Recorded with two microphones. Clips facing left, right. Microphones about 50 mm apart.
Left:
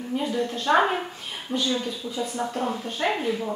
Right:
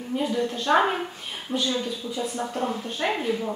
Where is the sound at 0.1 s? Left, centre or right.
Centre.